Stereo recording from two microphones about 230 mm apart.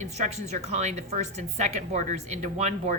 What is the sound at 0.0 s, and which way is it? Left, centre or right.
A woman's voice, right.